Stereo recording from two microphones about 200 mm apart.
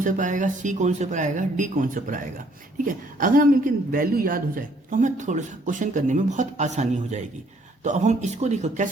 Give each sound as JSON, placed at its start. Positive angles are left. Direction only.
{"t": 0.0, "sound": "a man's voice", "side_deg": -40}